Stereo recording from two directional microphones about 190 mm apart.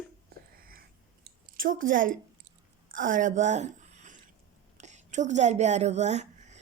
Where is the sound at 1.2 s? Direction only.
45° right (ahead or behind).